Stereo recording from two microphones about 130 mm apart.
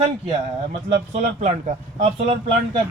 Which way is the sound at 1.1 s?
60° right (ahead or behind).